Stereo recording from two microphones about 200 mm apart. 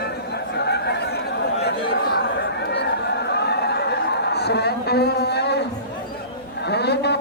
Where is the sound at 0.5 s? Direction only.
55° left (ahead or behind).